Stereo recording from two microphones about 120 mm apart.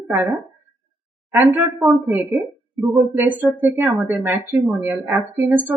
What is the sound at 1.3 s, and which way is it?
Speech, 15° right (ahead or behind).